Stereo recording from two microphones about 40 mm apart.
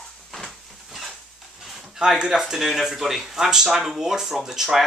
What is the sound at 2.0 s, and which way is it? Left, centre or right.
Speech, right.